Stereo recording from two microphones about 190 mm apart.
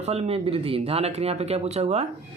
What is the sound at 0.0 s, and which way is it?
Speech, 35° right (ahead or behind).